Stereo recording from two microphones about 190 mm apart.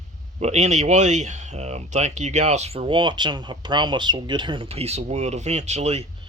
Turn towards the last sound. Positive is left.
turn(degrees=-35)  # may be behind; listen again after turning